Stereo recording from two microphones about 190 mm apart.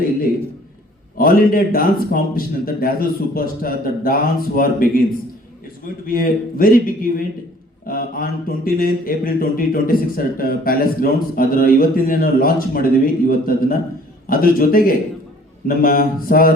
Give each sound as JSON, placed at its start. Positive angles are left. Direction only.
{"t": 1.2, "sound": "a man's voice", "side_deg": 50}